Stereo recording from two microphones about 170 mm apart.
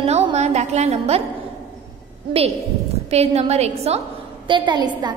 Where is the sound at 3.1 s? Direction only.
40° right (ahead or behind).